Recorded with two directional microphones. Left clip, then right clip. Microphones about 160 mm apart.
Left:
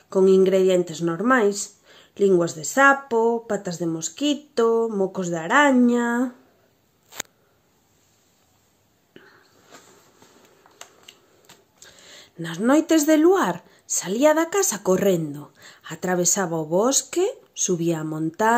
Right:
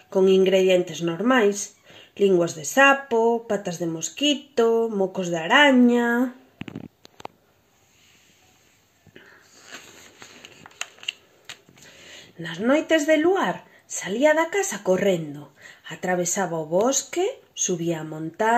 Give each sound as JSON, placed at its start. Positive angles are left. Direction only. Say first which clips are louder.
{"t": 0.1, "sound": "speech", "louder": "left 1 dB", "side_deg": 25}
{"t": 12.4, "sound": "speech", "louder": "left 2 dB", "side_deg": 45}
{"t": 15.3, "sound": "speech", "louder": "left 1 dB", "side_deg": 35}